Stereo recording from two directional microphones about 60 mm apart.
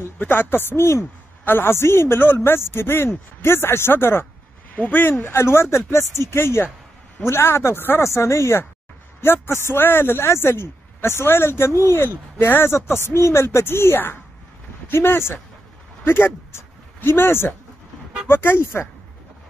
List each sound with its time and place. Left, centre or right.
0.2 s a man's voice: left
8.0 s a man's voice: left